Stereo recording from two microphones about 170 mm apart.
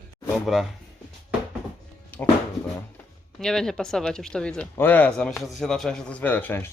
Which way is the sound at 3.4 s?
5° left (ahead or behind).